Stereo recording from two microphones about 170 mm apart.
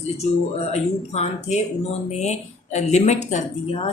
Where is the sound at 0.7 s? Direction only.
40° left (ahead or behind).